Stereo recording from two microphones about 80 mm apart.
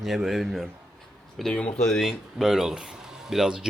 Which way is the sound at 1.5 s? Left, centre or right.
Centre.